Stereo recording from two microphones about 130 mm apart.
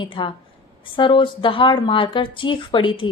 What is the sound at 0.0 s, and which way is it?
A woman's voice, 40° left (ahead or behind).